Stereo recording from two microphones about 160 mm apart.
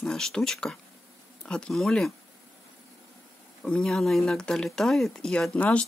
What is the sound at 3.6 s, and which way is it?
Speech, 5° left (ahead or behind).